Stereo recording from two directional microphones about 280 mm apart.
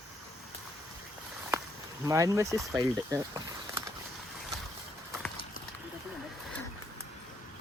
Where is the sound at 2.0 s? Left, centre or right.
Centre.